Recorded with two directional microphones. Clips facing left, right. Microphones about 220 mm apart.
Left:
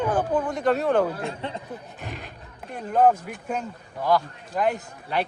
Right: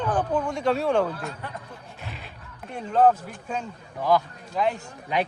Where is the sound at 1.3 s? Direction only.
25° left (ahead or behind).